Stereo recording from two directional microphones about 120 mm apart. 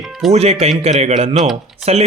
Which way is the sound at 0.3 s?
60° right (ahead or behind).